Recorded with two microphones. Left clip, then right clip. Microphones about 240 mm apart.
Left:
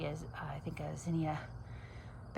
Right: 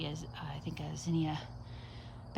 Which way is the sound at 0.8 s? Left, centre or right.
Centre.